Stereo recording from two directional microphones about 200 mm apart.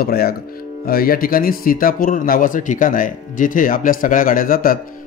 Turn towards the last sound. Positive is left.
turn(degrees=45)  # may be behind; listen again after turning